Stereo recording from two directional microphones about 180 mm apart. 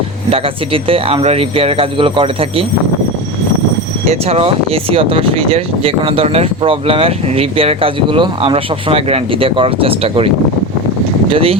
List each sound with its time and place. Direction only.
0.3 s speech: 30° right (ahead or behind)
4.1 s speech: 35° right (ahead or behind)